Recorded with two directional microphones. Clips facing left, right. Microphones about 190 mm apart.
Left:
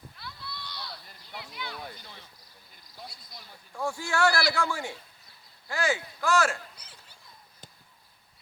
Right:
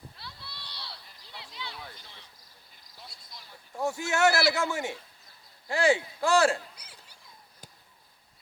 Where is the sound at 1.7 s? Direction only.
45° left (ahead or behind).